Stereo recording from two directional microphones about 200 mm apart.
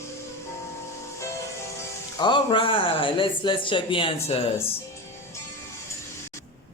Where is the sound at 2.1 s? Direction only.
25° left (ahead or behind).